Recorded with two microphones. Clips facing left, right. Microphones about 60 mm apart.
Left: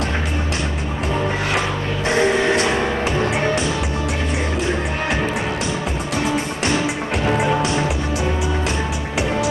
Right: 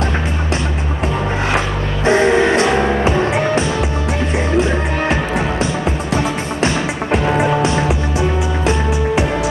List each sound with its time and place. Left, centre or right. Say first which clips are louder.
2.0 s music: right 5 dB; right
7.1 s music: right 5 dB; right